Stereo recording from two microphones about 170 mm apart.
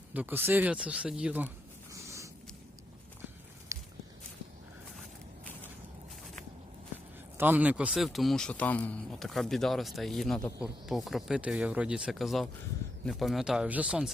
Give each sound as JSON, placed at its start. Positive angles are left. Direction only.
{"t": 0.1, "sound": "speech", "side_deg": -10}
{"t": 1.9, "sound": "a sound", "side_deg": -20}
{"t": 3.7, "sound": "walk", "side_deg": -20}
{"t": 7.3, "sound": "speech", "side_deg": -10}